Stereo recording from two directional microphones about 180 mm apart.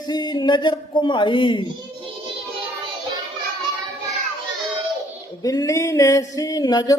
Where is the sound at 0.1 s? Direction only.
25° left (ahead or behind).